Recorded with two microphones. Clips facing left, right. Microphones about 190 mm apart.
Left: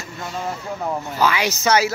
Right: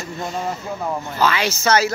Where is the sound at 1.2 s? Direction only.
15° left (ahead or behind).